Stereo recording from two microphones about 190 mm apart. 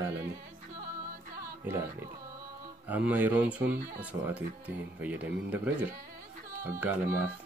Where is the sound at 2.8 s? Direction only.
10° right (ahead or behind).